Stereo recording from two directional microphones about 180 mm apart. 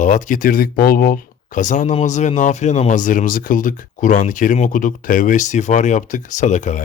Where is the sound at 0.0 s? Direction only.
45° left (ahead or behind).